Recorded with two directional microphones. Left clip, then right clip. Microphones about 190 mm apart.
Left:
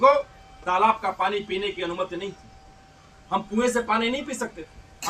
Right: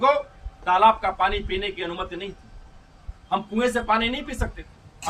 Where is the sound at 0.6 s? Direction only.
5° left (ahead or behind).